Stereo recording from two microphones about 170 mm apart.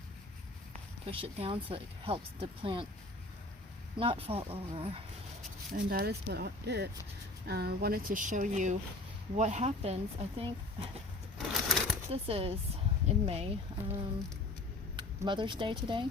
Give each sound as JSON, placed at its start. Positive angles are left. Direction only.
{"t": 0.7, "sound": "a sound", "side_deg": -35}
{"t": 1.7, "sound": "speech", "side_deg": -35}
{"t": 3.9, "sound": "speech", "side_deg": -30}
{"t": 5.9, "sound": "speech", "side_deg": -65}
{"t": 11.3, "sound": "a sound", "side_deg": 0}
{"t": 12.1, "sound": "speech", "side_deg": -35}